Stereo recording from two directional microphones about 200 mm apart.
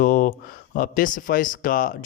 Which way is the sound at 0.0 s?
45° left (ahead or behind).